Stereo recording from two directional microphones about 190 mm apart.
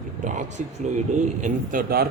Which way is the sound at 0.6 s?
40° right (ahead or behind).